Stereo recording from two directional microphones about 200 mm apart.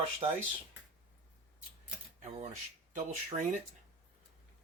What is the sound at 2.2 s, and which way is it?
Speech, 35° right (ahead or behind).